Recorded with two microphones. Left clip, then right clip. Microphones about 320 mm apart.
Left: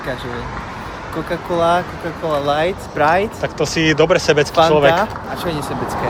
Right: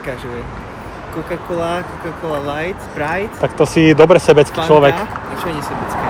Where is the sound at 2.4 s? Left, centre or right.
Centre.